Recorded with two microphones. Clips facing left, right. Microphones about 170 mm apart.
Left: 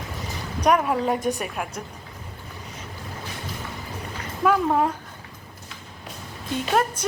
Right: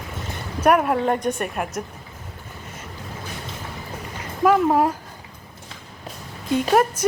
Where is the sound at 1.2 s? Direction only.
Centre (ahead or behind).